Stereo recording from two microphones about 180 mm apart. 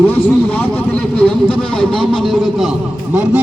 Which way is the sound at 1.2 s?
5° left (ahead or behind).